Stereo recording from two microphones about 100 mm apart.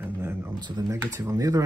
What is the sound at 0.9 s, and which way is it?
Speech, 30° right (ahead or behind).